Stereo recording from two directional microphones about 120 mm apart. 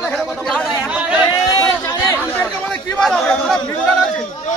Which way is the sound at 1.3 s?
35° left (ahead or behind).